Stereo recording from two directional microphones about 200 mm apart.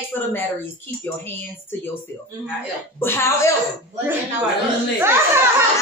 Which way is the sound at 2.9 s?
10° left (ahead or behind).